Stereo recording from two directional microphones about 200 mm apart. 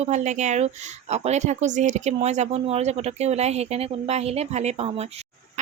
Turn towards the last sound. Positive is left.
turn(degrees=-30)  # may be behind; listen again after turning